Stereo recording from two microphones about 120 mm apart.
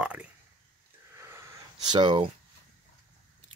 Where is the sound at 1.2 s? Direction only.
20° right (ahead or behind).